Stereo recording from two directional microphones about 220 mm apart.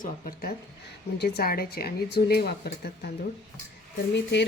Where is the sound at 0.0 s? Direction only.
40° left (ahead or behind).